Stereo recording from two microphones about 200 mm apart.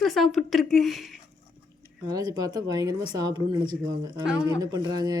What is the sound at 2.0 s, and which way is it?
A man's voice, 20° right (ahead or behind).